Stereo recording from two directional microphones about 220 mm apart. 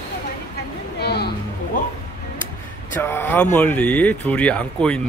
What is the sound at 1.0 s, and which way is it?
Music, 45° left (ahead or behind).